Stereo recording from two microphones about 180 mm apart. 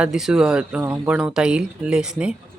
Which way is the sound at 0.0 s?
Centre (ahead or behind).